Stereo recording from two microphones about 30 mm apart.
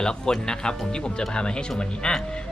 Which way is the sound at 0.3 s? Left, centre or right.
Left.